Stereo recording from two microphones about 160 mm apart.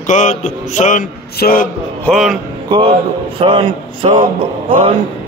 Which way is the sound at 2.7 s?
35° right (ahead or behind).